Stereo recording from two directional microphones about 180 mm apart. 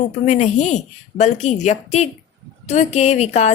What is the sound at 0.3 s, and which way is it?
A woman's voice, 40° left (ahead or behind).